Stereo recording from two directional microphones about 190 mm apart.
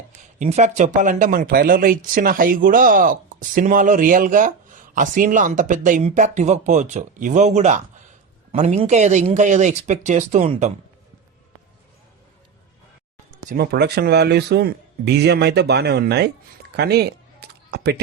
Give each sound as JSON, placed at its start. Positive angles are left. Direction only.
{"t": 0.3, "sound": "speech", "side_deg": -35}
{"t": 13.5, "sound": "speech", "side_deg": -60}
{"t": 16.7, "sound": "a sound", "side_deg": -60}